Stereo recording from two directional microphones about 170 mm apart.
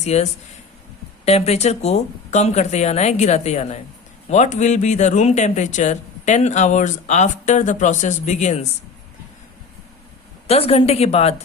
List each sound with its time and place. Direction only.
0.0 s speech: 40° left (ahead or behind)
10.4 s speech: 35° left (ahead or behind)